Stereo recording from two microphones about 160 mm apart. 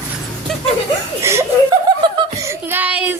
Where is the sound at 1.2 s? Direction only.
15° right (ahead or behind).